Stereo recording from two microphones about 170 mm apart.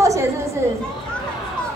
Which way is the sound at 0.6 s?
15° right (ahead or behind).